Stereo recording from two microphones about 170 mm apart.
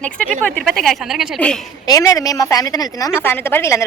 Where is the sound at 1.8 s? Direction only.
20° left (ahead or behind).